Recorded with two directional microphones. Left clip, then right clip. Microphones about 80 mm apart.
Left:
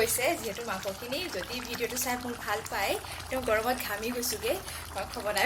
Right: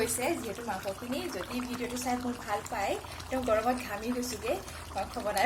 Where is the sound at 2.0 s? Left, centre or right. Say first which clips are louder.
Left 1 dB; centre.